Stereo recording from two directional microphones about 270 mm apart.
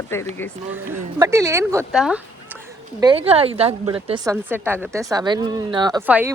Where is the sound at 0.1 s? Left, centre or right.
Centre.